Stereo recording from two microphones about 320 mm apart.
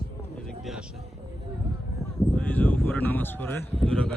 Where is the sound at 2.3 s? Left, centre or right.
Centre.